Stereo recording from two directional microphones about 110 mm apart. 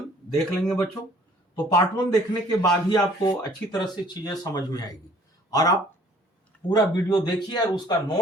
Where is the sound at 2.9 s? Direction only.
40° left (ahead or behind).